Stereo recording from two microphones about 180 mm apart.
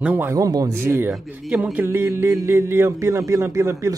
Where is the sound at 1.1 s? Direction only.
Centre (ahead or behind).